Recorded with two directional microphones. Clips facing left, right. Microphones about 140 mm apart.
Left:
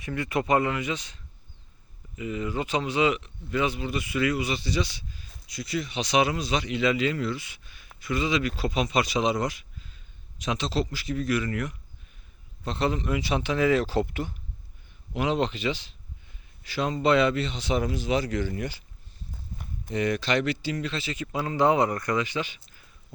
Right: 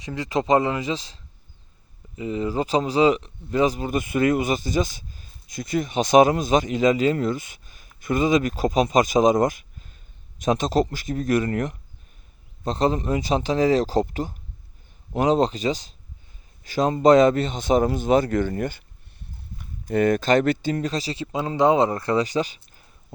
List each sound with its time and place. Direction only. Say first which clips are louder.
0.0 s speech: right 3 dB; 20° right (ahead or behind); by 18.8 s 50° right (ahead or behind)
19.9 s speech: right 7 dB; 50° right (ahead or behind)
21.3 s speech: right 4 dB; 25° right (ahead or behind)